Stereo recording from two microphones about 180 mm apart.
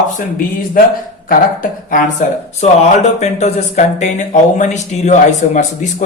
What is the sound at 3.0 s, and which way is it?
Speech, 40° left (ahead or behind).